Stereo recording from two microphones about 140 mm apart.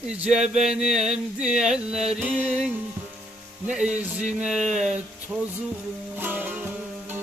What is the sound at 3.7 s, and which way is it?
Music, 10° right (ahead or behind).